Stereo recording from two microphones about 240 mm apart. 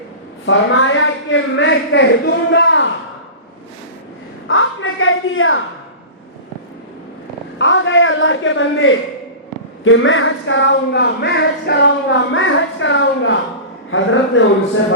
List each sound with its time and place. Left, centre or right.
0.4 s speech: left
4.4 s speech: left
7.6 s speech: left